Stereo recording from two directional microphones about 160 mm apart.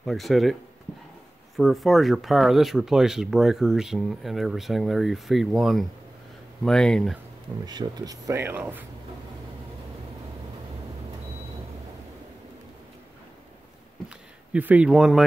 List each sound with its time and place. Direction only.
0.0 s speech: centre (ahead or behind)
1.6 s speech: centre (ahead or behind)
7.6 s speech: 25° right (ahead or behind)
14.0 s a sound: 10° right (ahead or behind)